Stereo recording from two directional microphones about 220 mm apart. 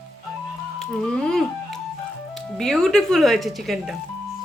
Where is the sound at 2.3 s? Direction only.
Centre (ahead or behind).